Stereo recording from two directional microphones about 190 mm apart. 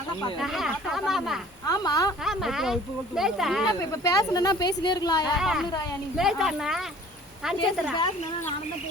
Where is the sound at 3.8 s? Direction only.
20° left (ahead or behind).